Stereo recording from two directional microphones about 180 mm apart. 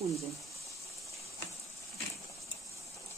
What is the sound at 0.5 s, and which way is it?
Water, 15° left (ahead or behind).